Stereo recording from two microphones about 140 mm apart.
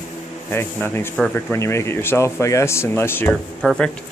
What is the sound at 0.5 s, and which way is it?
A man's voice, 15° left (ahead or behind).